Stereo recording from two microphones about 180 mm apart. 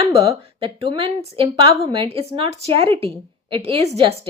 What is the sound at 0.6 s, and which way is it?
A woman's voice, 30° right (ahead or behind).